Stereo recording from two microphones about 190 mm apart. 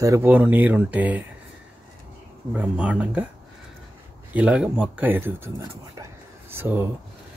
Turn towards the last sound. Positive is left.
turn(degrees=-10)  # may be behind; listen again after turning